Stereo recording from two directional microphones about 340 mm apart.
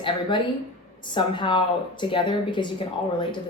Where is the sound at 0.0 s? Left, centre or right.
Centre.